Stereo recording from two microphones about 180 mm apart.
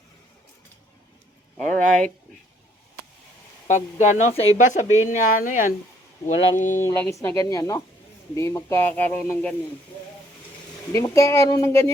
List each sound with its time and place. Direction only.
1.5 s speech: 5° left (ahead or behind)
3.7 s speech: 40° left (ahead or behind)
6.8 s speech: 15° left (ahead or behind)
10.9 s speech: 15° left (ahead or behind)